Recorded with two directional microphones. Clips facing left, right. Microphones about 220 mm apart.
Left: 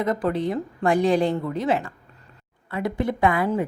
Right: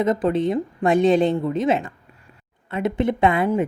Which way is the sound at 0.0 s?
20° right (ahead or behind).